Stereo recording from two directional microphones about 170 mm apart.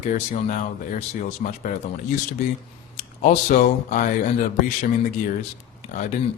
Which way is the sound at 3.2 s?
50° left (ahead or behind).